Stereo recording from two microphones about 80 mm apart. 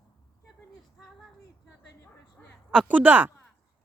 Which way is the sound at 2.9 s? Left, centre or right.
Right.